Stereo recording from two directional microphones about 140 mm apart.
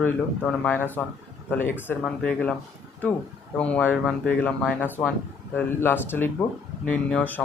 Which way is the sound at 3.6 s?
10° left (ahead or behind).